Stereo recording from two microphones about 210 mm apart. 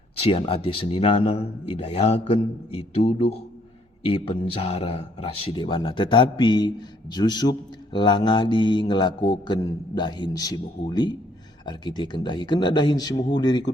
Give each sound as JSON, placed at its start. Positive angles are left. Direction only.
{"t": 0.2, "sound": "mantra", "side_deg": 25}